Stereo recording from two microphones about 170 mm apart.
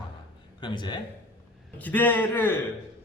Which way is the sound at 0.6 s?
25° left (ahead or behind).